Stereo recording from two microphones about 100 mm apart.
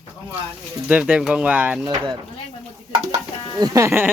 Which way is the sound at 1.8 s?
45° right (ahead or behind).